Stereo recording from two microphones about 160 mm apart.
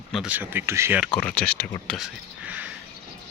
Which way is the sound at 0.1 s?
5° right (ahead or behind).